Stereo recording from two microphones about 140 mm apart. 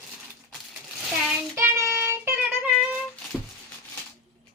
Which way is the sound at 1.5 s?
15° right (ahead or behind).